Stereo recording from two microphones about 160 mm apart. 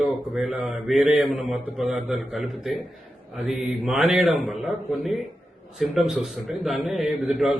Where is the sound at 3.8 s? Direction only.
Centre (ahead or behind).